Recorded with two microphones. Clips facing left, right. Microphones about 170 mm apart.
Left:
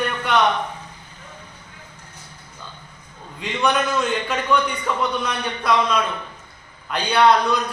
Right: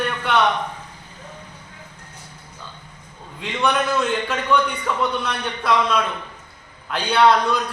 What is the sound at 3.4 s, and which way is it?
A man's voice, centre (ahead or behind).